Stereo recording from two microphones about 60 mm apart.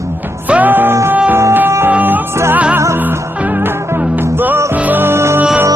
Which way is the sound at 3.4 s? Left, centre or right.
Right.